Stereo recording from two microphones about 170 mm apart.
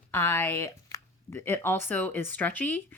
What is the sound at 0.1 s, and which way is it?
Speech, 15° left (ahead or behind).